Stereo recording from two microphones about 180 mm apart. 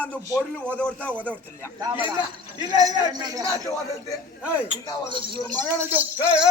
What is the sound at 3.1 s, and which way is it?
Speech, 20° right (ahead or behind).